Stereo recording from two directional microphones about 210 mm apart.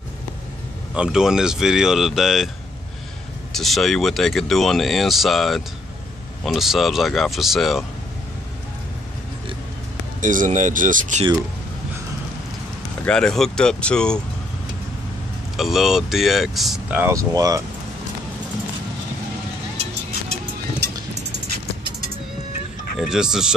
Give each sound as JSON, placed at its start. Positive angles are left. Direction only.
{"t": 0.9, "sound": "speech", "side_deg": -5}
{"t": 3.5, "sound": "speech", "side_deg": 0}
{"t": 10.2, "sound": "speech", "side_deg": -40}
{"t": 13.0, "sound": "speech", "side_deg": 5}
{"t": 15.5, "sound": "speech", "side_deg": 0}
{"t": 22.9, "sound": "speech", "side_deg": -5}